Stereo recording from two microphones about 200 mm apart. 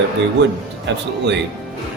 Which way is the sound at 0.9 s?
65° right (ahead or behind).